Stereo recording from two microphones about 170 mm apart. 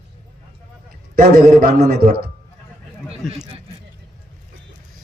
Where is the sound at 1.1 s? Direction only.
55° right (ahead or behind).